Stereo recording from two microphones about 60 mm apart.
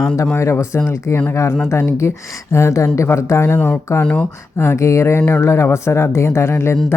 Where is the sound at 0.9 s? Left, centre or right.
Left.